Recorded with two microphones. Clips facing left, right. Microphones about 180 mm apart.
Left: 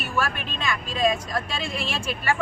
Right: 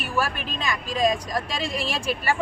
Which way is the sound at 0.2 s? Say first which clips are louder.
Right 1 dB; 35° right (ahead or behind).